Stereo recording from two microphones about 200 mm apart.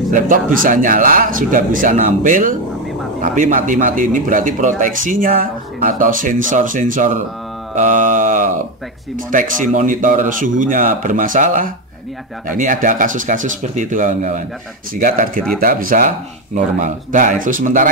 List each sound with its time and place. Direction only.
0.1 s speech: 40° right (ahead or behind)